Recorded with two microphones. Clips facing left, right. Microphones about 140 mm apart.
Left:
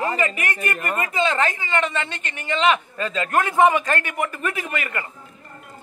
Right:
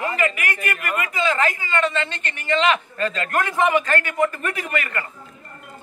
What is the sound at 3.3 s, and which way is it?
A man's voice, 15° left (ahead or behind).